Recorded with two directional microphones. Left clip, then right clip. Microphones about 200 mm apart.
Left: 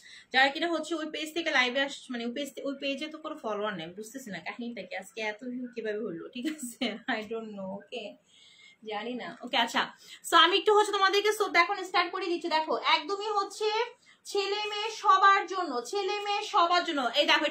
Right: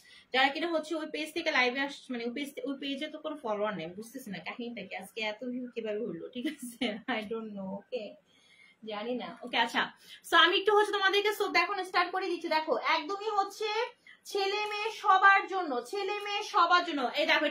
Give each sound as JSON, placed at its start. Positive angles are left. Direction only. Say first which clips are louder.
{"t": 0.3, "sound": "a woman's voice", "louder": "left 2 dB", "side_deg": 15}
{"t": 4.8, "sound": "speech", "louder": "left 2 dB", "side_deg": 75}
{"t": 5.8, "sound": "a woman's voice", "louder": "left 2 dB", "side_deg": 15}
{"t": 9.5, "sound": "a woman's voice", "louder": "left 2 dB", "side_deg": 20}